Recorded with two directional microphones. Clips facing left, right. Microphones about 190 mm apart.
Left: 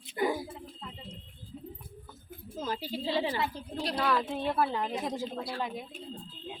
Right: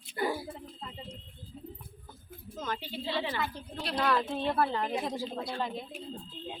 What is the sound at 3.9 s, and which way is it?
Speech, 10° left (ahead or behind).